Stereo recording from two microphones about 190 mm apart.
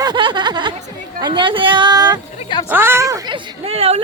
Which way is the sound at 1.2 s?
25° right (ahead or behind).